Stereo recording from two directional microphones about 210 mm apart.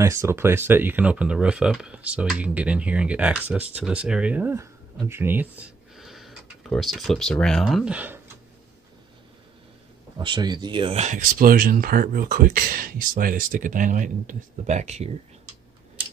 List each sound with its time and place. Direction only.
0.0 s speech: 15° right (ahead or behind)
10.1 s speech: 20° right (ahead or behind)